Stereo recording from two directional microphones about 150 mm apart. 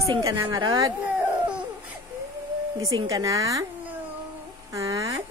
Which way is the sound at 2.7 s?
25° right (ahead or behind).